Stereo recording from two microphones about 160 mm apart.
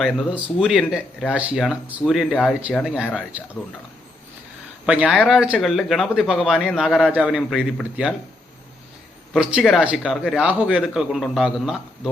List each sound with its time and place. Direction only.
0.0 s speech: 5° right (ahead or behind)
4.9 s speech: 10° right (ahead or behind)
9.3 s speech: 5° right (ahead or behind)